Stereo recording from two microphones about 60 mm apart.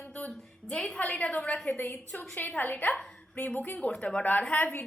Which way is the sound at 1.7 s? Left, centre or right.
Left.